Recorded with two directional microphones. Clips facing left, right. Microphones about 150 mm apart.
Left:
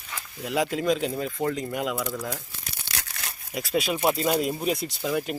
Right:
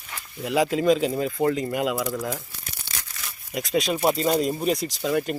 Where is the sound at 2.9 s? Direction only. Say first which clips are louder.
Left 3 dB; 60° left (ahead or behind).